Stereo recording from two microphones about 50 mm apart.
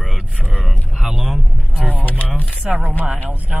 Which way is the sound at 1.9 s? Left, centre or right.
Left.